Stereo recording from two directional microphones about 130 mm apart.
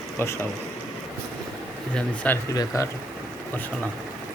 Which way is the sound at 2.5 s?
25° left (ahead or behind).